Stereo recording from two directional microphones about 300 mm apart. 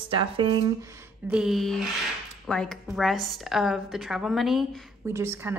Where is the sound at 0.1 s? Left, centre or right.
Centre.